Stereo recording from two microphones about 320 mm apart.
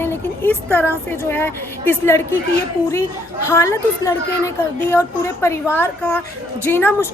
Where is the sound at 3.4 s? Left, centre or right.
Centre.